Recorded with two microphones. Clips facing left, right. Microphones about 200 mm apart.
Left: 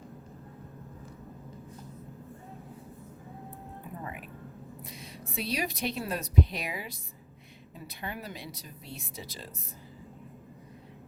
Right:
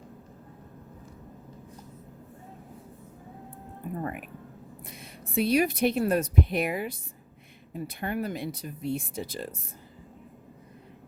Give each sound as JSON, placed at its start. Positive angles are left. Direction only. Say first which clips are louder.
{"t": 4.0, "sound": "speech", "louder": "right 6 dB", "side_deg": -55}